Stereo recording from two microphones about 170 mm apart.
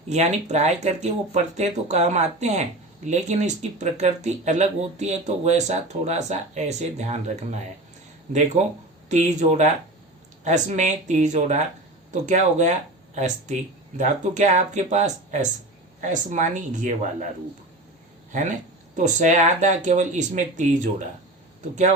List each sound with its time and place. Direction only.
0.1 s speech: 40° right (ahead or behind)
18.3 s speech: 45° right (ahead or behind)